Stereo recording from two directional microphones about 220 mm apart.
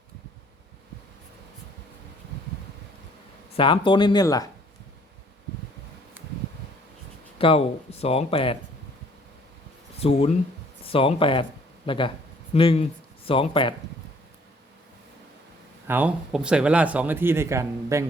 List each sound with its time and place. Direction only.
3.5 s speech: 25° left (ahead or behind)
7.3 s speech: 25° left (ahead or behind)
10.0 s speech: 25° left (ahead or behind)
15.9 s speech: 5° right (ahead or behind)